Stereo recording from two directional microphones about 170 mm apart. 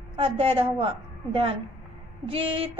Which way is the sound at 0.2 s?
35° right (ahead or behind).